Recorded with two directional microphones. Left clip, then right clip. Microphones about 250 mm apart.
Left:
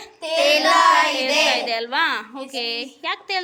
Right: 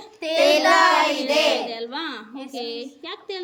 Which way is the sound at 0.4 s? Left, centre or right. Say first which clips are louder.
Left 1 dB; right.